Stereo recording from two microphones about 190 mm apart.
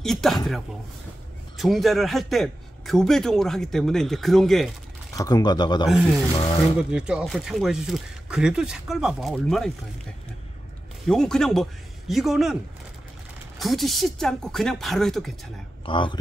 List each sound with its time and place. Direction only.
0.0 s speech: centre (ahead or behind)
1.6 s speech: centre (ahead or behind)
5.1 s speech: 20° left (ahead or behind)
6.8 s speech: 5° right (ahead or behind)
11.1 s speech: 5° left (ahead or behind)
13.6 s speech: centre (ahead or behind)
15.8 s speech: 25° left (ahead or behind)